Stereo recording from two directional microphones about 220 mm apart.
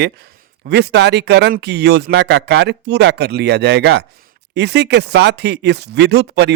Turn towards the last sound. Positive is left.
turn(degrees=-50)  # may be behind; listen again after turning